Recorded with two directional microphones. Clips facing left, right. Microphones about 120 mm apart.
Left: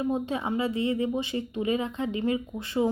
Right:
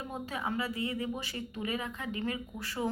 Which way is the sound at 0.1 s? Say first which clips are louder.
Left 8 dB; 25° left (ahead or behind).